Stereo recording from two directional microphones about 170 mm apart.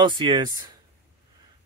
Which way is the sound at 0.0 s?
25° right (ahead or behind).